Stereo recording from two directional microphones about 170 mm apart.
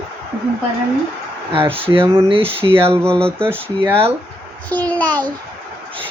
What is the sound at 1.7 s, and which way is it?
Speech, 30° right (ahead or behind).